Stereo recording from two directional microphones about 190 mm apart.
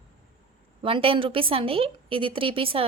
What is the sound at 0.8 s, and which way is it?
A woman's voice, 30° right (ahead or behind).